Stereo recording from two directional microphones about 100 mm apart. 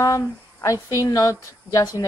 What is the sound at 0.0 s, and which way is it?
Speech, 35° left (ahead or behind).